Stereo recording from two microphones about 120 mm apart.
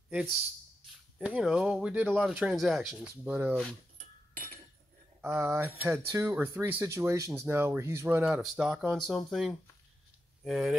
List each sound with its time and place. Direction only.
1.1 s speech: 5° right (ahead or behind)
3.0 s speech: 15° right (ahead or behind)
5.2 s speech: 20° right (ahead or behind); by 10.8 s centre (ahead or behind)